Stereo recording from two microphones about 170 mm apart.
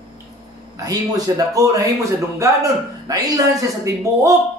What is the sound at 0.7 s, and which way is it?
Speech, 20° right (ahead or behind).